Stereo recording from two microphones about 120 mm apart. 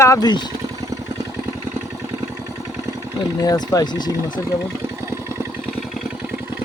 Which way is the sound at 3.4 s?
30° left (ahead or behind).